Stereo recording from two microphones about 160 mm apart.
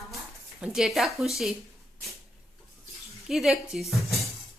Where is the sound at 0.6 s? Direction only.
5° right (ahead or behind).